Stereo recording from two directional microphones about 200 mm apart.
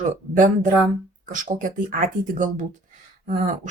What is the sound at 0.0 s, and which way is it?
Speech, 40° right (ahead or behind).